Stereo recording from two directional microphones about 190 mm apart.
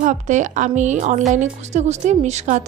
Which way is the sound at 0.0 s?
40° right (ahead or behind).